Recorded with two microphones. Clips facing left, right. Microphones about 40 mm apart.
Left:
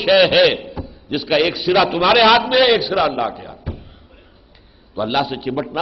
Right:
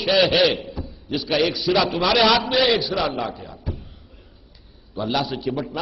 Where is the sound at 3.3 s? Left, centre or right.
Centre.